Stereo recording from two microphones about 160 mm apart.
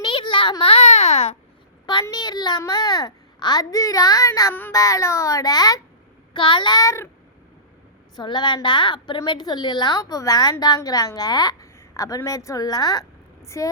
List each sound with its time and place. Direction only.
0.0 s a sound: 30° left (ahead or behind)
1.9 s a woman's voice: 25° left (ahead or behind)
8.1 s a woman's voice: 30° left (ahead or behind)